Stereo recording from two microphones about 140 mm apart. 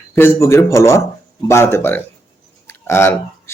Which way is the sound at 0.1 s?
15° left (ahead or behind).